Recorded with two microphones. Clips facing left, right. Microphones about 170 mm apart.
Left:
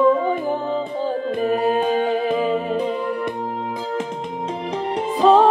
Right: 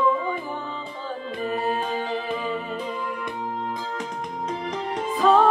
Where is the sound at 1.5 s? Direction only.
60° left (ahead or behind).